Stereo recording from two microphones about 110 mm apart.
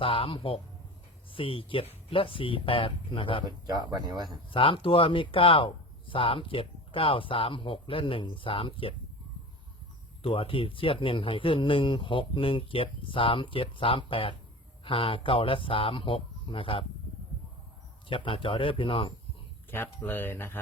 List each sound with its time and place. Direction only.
0.0 s speech: 55° left (ahead or behind)
3.4 s speech: 40° right (ahead or behind)
4.5 s speech: 55° left (ahead or behind)
10.2 s speech: 55° left (ahead or behind)
18.1 s speech: 50° left (ahead or behind)
19.7 s speech: 20° left (ahead or behind)